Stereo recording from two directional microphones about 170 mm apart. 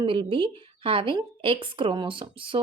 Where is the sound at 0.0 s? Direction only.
30° right (ahead or behind).